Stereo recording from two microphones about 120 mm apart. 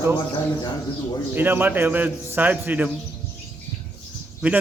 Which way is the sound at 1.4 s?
15° right (ahead or behind).